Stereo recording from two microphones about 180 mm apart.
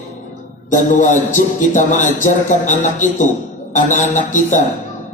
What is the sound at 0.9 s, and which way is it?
Speech, 45° left (ahead or behind).